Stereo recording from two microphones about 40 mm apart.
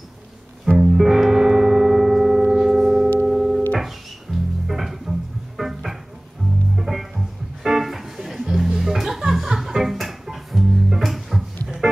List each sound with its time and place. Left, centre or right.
0.7 s music: centre